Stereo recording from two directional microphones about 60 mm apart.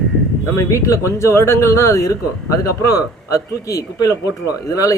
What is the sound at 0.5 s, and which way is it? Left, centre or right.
Speech, left.